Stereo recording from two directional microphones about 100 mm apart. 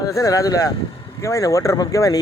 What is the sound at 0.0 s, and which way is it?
Speech, 35° left (ahead or behind).